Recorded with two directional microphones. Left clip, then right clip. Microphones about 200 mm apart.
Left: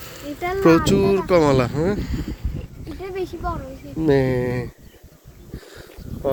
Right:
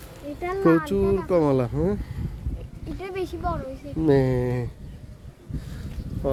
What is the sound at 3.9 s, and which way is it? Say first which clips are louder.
Speech: left 3 dB; 10° right (ahead or behind).